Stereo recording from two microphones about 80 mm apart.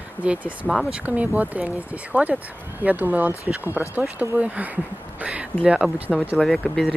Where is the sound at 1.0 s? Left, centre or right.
Centre.